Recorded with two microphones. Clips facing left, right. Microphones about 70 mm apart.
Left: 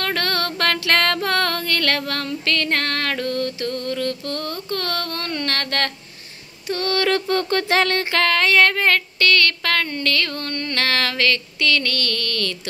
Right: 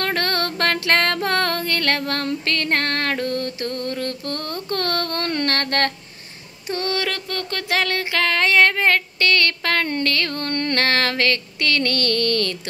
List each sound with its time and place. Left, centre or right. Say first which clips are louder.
0.0 s music: right 1 dB; right
6.7 s music: left 1 dB; right
7.1 s a sound: left 7 dB; centre
8.3 s female singing: right 1 dB; right
10.5 s music: right 4 dB; right
10.8 s a sound: even; right